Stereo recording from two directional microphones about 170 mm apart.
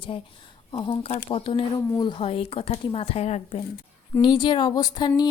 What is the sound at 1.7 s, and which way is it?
Speech, 20° left (ahead or behind).